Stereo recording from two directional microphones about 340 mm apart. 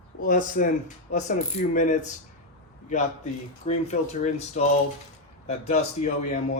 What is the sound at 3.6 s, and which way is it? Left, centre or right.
A man's voice, left.